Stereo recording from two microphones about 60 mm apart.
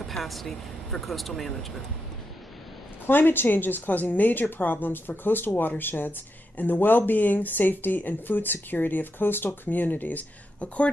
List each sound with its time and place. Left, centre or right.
0.0 s speech: centre
3.1 s speech: left